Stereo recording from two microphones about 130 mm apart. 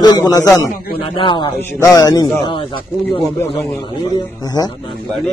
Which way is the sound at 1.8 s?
25° left (ahead or behind).